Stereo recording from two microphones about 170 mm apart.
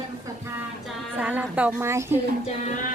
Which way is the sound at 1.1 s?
10° right (ahead or behind).